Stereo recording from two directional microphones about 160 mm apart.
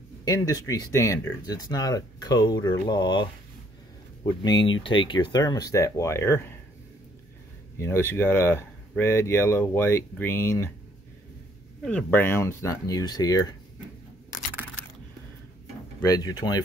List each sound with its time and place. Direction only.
0.2 s speech: 25° left (ahead or behind)
4.5 s speech: 30° left (ahead or behind)
7.8 s speech: 15° left (ahead or behind)
11.8 s speech: 10° left (ahead or behind)
16.0 s speech: 20° left (ahead or behind)